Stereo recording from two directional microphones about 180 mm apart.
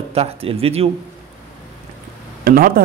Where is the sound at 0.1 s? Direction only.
35° right (ahead or behind).